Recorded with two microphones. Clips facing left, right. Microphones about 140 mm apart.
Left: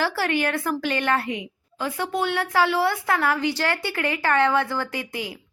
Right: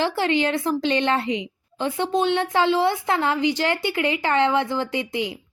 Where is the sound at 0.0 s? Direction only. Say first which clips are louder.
Right 2 dB; 20° right (ahead or behind).